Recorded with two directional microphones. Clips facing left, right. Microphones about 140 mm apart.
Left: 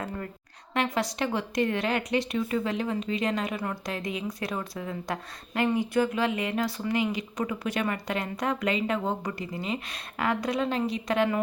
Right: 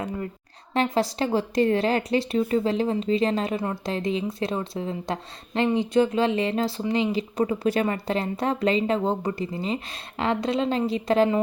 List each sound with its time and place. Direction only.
0.7 s speech: 30° right (ahead or behind)